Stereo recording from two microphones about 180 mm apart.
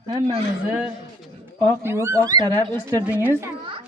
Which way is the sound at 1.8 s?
15° right (ahead or behind).